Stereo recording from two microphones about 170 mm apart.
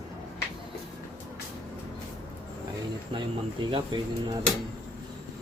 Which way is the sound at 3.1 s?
30° right (ahead or behind).